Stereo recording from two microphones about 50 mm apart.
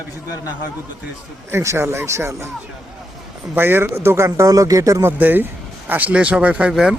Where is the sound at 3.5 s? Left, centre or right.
Right.